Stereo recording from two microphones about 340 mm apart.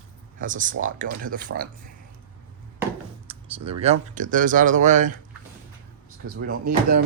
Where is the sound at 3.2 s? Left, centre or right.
Centre.